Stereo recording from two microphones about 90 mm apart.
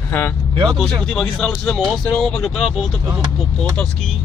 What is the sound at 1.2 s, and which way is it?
Speech, 10° left (ahead or behind).